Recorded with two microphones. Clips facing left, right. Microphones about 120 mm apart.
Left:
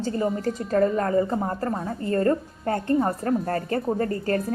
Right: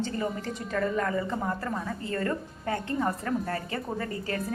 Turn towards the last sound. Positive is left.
turn(degrees=40)  # may be behind; listen again after turning